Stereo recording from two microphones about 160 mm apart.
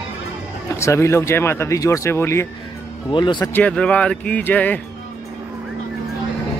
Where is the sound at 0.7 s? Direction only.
20° left (ahead or behind).